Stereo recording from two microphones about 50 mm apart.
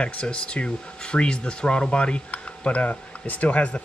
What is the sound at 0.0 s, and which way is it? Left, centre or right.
Speech, left.